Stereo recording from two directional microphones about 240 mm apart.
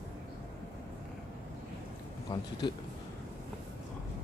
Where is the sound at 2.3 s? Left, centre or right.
Centre.